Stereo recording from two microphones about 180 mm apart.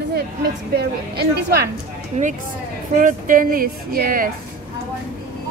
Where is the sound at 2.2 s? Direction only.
40° right (ahead or behind).